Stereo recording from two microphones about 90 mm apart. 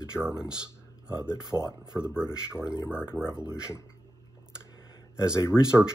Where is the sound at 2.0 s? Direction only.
10° right (ahead or behind).